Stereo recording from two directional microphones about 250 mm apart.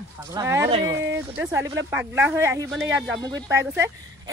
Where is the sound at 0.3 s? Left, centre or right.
Centre.